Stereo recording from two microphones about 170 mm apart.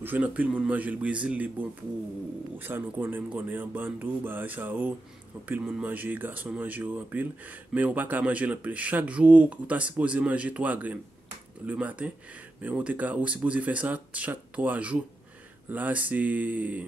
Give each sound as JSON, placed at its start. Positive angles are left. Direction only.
{"t": 0.0, "sound": "speech", "side_deg": -10}